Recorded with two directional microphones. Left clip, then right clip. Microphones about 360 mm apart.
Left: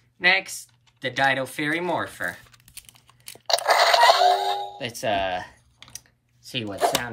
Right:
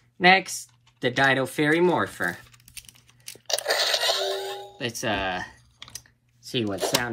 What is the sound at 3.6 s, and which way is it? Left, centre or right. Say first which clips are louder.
Music: left 8 dB; centre.